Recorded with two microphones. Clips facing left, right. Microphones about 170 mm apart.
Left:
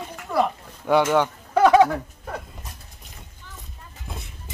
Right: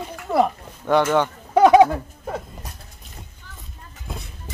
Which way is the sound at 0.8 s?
5° left (ahead or behind).